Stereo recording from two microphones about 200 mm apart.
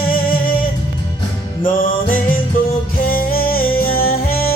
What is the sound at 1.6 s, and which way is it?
Music, 45° left (ahead or behind).